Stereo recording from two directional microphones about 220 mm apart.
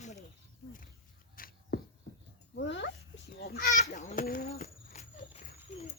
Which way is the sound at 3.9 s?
35° left (ahead or behind).